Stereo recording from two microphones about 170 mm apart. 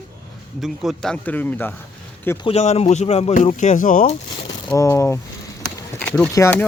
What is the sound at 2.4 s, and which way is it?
Speech, 40° left (ahead or behind).